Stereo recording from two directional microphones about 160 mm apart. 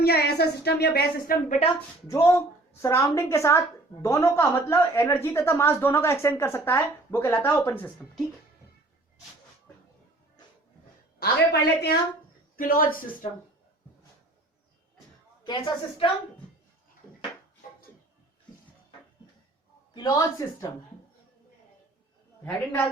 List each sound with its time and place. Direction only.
0.0 s a woman's voice: 85° left
2.0 s speech: 20° left (ahead or behind)
11.2 s a woman's voice: 90° left
12.5 s speech: 65° left (ahead or behind)
15.4 s speech: 25° left (ahead or behind)
19.9 s speech: 25° left (ahead or behind)
22.4 s speech: 10° left (ahead or behind)